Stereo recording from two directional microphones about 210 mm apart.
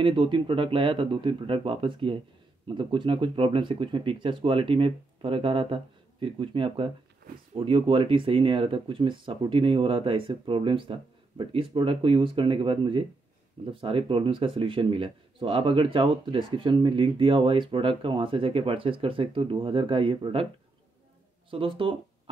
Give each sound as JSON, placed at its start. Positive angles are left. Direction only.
{"t": 0.0, "sound": "speech", "side_deg": -25}
{"t": 21.5, "sound": "speech", "side_deg": -25}